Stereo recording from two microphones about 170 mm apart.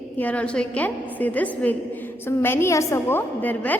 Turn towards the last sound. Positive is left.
turn(degrees=10)  # may be behind; listen again after turning